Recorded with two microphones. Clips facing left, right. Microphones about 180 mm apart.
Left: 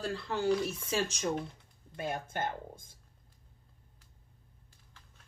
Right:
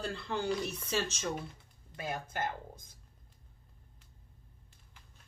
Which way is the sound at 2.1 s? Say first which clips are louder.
Left 1 dB; 25° left (ahead or behind).